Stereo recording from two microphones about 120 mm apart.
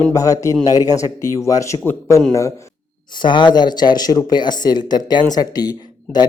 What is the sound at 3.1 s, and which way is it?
A man's voice, 40° left (ahead or behind).